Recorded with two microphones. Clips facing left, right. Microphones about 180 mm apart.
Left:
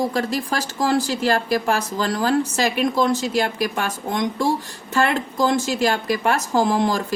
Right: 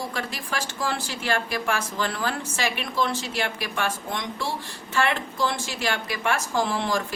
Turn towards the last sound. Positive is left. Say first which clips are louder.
# left 6 dB
turn(degrees=40)  # may be behind; listen again after turning